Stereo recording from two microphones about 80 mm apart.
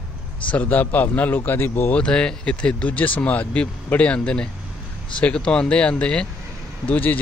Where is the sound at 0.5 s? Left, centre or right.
Left.